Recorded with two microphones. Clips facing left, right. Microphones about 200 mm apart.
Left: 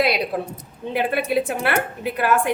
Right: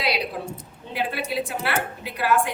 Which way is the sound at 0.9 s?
55° left (ahead or behind).